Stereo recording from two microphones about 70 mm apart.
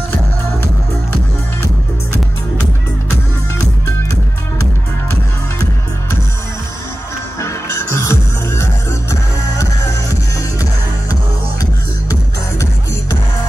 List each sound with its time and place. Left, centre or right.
7.3 s music: left